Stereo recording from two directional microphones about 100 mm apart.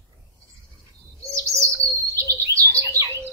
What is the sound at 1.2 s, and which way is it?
Chirp, 30° right (ahead or behind).